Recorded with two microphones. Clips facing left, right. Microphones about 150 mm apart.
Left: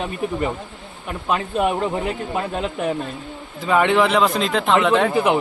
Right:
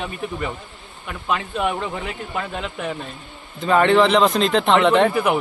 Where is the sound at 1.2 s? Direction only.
35° left (ahead or behind).